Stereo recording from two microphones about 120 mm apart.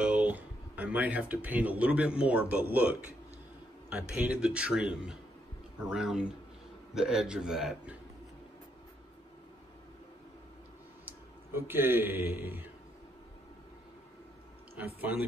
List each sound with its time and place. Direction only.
0.0 s a man's voice: 10° right (ahead or behind)
11.1 s a man's voice: 20° right (ahead or behind)
15.0 s a man's voice: 15° right (ahead or behind)